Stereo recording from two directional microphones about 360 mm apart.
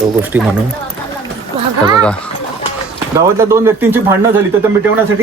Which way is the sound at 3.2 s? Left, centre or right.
Centre.